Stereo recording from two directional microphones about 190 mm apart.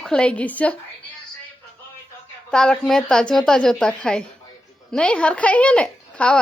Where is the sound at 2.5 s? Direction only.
5° left (ahead or behind).